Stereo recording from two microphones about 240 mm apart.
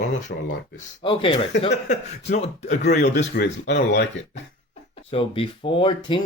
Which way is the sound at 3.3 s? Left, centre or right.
Left.